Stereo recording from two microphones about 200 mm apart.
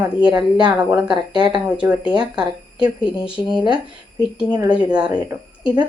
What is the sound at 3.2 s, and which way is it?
Speech, 25° left (ahead or behind).